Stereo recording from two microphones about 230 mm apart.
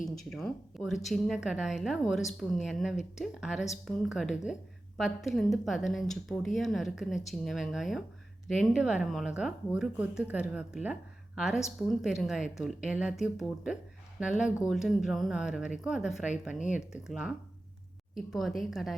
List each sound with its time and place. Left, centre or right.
0.0 s speech: centre
16.6 s speech: left
16.9 s speech: centre